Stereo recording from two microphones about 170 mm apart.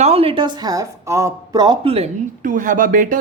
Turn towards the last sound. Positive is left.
turn(degrees=-50)  # may be behind; listen again after turning